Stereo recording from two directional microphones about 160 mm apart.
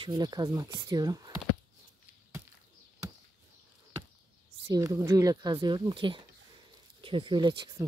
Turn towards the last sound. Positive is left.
turn(degrees=-30)  # may be behind; listen again after turning